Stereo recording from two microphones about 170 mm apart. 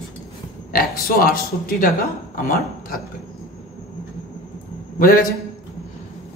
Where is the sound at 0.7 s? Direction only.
60° left (ahead or behind).